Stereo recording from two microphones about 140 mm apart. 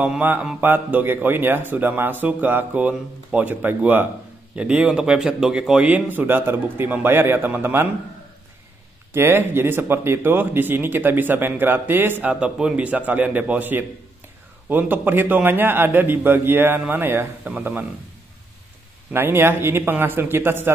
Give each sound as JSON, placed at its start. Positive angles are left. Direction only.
{"t": 0.0, "sound": "speech", "side_deg": -10}
{"t": 9.1, "sound": "speech", "side_deg": -15}
{"t": 19.1, "sound": "speech", "side_deg": -15}